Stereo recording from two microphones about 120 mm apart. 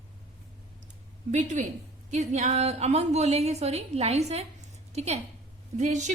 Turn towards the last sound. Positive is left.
turn(degrees=-80)